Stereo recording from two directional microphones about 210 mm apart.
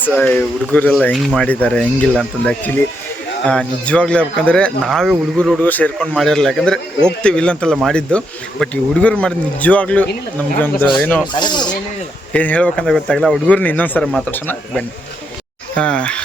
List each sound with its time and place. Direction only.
0.0 s speech: 10° left (ahead or behind)
11.3 s speech: 20° left (ahead or behind)
12.3 s speech: 5° left (ahead or behind)